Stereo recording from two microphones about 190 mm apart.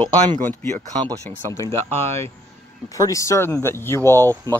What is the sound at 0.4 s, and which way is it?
Speech, 10° left (ahead or behind).